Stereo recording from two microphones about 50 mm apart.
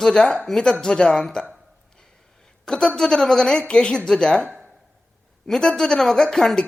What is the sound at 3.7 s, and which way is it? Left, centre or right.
Speech, centre.